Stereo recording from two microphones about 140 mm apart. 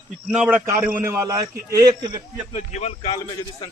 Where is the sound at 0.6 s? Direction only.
20° right (ahead or behind).